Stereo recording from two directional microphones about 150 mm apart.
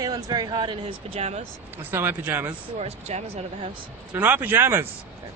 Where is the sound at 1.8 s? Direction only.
15° right (ahead or behind).